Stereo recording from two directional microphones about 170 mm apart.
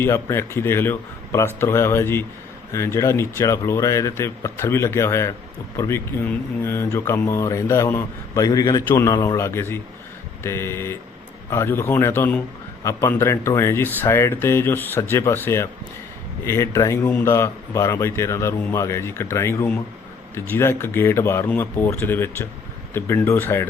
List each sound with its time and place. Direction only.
0.0 s speech: 15° left (ahead or behind)